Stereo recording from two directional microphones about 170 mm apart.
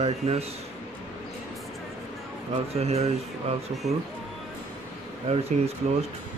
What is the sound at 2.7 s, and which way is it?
Speech, 40° right (ahead or behind).